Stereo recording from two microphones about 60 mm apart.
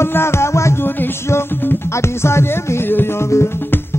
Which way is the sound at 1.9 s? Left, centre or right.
Left.